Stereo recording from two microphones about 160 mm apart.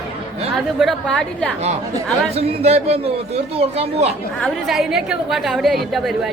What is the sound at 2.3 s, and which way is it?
A man's voice, 40° right (ahead or behind).